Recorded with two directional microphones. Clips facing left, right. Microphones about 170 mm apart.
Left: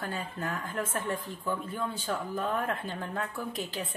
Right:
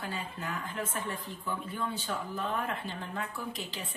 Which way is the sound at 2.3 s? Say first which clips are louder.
Left 3 dB; 50° left (ahead or behind).